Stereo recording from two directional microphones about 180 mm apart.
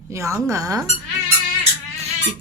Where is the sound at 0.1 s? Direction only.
15° right (ahead or behind).